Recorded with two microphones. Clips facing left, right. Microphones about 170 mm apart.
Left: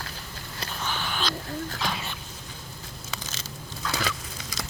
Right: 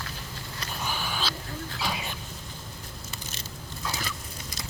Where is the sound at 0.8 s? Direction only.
10° right (ahead or behind).